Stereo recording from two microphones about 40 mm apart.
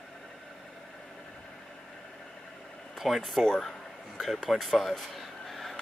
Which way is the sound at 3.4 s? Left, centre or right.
Centre.